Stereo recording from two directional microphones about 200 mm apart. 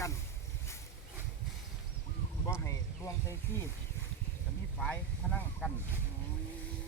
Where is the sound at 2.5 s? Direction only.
15° left (ahead or behind).